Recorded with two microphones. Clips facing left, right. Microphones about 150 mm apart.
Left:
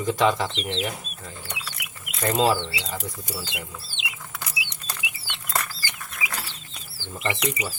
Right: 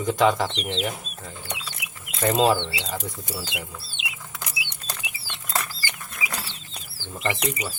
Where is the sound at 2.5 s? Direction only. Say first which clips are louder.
Right 1 dB; 5° left (ahead or behind).